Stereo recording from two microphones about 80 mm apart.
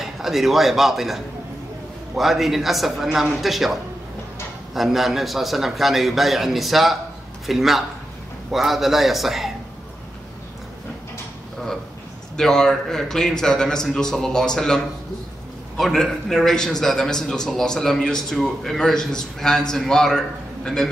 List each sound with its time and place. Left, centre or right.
0.0 s a man's voice: centre
12.4 s a man's voice: centre
15.8 s a man's voice: centre